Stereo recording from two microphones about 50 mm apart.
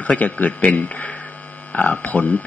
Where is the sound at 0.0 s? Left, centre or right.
Left.